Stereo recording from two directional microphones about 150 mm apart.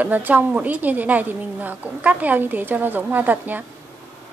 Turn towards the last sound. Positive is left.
turn(degrees=-10)  # may be behind; listen again after turning